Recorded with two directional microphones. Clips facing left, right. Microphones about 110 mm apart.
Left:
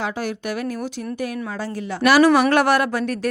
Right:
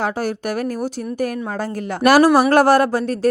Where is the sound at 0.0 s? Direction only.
45° right (ahead or behind).